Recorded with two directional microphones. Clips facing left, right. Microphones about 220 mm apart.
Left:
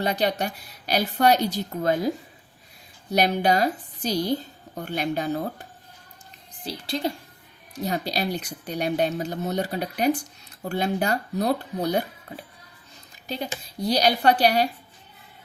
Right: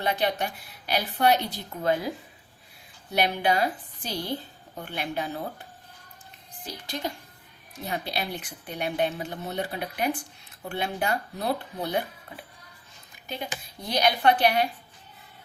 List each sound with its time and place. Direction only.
0.0 s a woman's voice: 40° left (ahead or behind)
3.1 s a woman's voice: 40° left (ahead or behind)
6.7 s a woman's voice: 30° left (ahead or behind)
7.9 s a woman's voice: 40° left (ahead or behind)
13.2 s a woman's voice: 35° left (ahead or behind)